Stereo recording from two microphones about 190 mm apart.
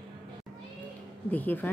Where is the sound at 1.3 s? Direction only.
10° left (ahead or behind).